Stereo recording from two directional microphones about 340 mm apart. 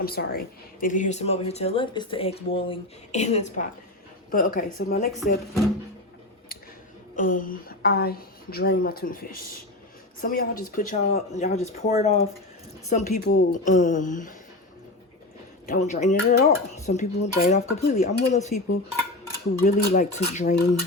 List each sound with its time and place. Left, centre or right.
0.0 s speech: left
7.2 s speech: left
15.6 s speech: left
19.6 s speech: left